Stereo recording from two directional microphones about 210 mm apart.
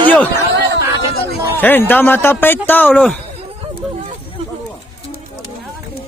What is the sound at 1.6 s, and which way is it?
Speech, 10° left (ahead or behind).